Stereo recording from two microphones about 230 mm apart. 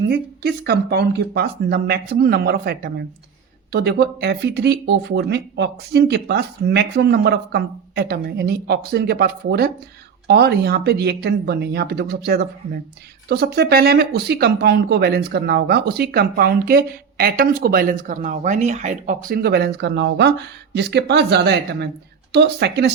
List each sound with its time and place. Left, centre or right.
0.1 s speech: right